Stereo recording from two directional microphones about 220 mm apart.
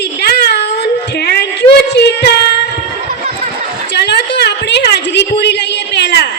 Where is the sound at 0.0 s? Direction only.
50° left (ahead or behind).